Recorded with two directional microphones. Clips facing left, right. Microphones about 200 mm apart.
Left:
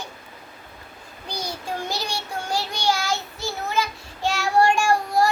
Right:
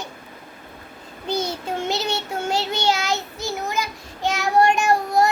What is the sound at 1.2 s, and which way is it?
Child singing, 25° right (ahead or behind).